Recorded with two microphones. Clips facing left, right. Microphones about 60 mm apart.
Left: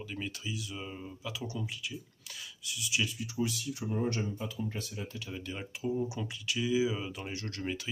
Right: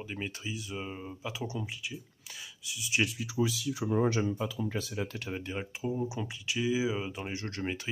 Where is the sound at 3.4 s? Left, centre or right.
Right.